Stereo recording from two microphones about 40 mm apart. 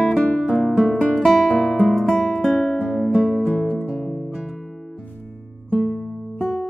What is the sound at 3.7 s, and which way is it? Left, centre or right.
Music, left.